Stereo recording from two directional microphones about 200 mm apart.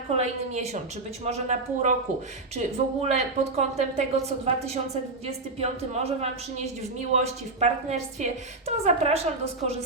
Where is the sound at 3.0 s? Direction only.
35° right (ahead or behind).